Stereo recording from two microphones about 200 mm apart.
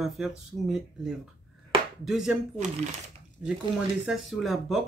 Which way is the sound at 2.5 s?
35° right (ahead or behind).